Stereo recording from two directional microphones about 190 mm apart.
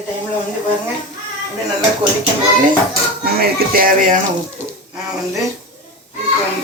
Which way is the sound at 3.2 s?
55° right (ahead or behind).